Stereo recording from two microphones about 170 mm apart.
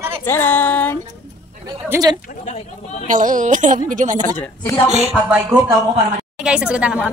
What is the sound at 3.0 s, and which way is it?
Speech, 50° right (ahead or behind).